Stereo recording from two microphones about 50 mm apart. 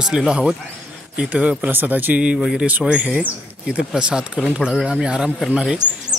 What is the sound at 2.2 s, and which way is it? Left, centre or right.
Speech, right.